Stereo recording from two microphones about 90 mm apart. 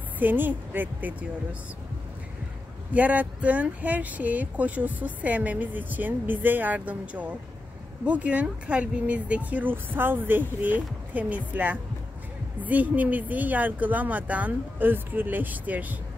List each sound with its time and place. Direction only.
0.2 s speech: 20° right (ahead or behind)
2.9 s speech: 15° right (ahead or behind)